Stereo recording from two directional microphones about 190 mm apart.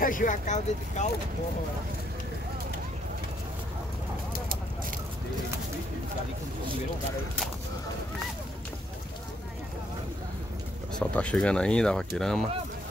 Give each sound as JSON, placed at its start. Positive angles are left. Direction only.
{"t": 0.0, "sound": "speech", "side_deg": 45}
{"t": 11.0, "sound": "speech", "side_deg": 5}